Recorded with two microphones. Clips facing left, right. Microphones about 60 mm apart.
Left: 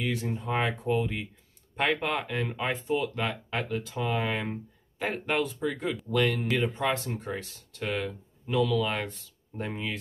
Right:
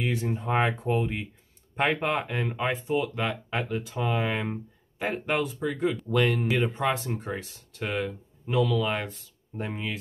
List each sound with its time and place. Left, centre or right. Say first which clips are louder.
0.0 s speech: right 2 dB; right
6.0 s speech: even; centre
8.5 s speech: right 1 dB; centre